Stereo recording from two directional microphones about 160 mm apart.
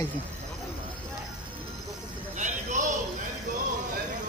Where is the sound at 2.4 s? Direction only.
50° right (ahead or behind).